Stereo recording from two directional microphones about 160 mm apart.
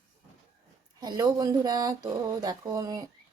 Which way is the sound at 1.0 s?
25° right (ahead or behind).